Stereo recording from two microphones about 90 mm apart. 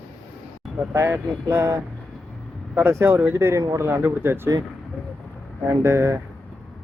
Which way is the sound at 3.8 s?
25° right (ahead or behind).